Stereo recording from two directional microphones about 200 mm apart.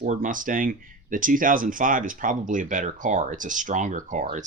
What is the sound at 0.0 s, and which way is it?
Speech, 40° right (ahead or behind).